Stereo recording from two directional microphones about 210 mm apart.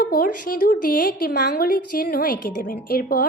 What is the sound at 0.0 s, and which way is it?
A woman's voice, 45° left (ahead or behind).